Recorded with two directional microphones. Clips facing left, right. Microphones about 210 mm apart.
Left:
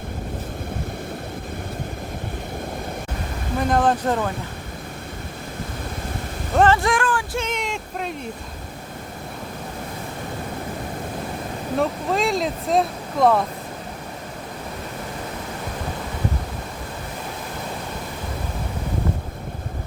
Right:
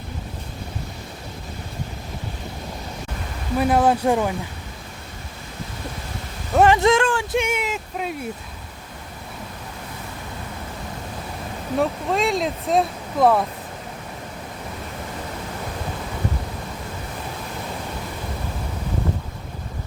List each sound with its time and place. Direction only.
3.6 s speech: 10° right (ahead or behind)
6.6 s speech: 20° right (ahead or behind)
7.4 s speech: 5° right (ahead or behind)
11.8 s speech: centre (ahead or behind)